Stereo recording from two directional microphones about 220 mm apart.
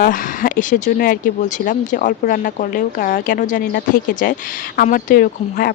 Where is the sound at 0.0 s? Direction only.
35° left (ahead or behind).